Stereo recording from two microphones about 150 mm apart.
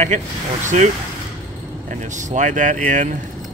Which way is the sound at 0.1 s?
55° right (ahead or behind).